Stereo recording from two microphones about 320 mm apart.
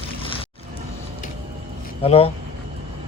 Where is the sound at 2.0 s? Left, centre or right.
Centre.